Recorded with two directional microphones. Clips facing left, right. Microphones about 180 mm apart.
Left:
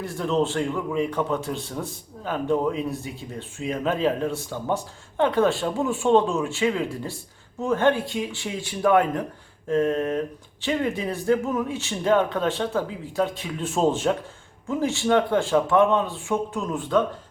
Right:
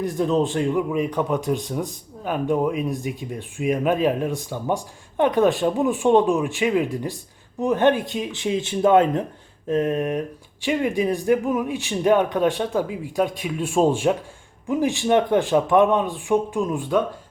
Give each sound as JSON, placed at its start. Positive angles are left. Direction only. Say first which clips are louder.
{"t": 0.0, "sound": "a man's voice", "louder": "right 3 dB", "side_deg": -15}